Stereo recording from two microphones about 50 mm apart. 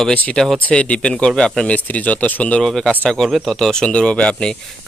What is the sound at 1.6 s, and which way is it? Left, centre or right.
Speech, left.